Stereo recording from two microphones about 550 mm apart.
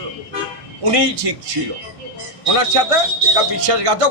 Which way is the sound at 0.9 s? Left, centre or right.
Right.